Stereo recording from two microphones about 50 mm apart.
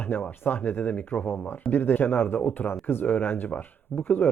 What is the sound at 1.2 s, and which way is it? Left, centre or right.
Speech, left.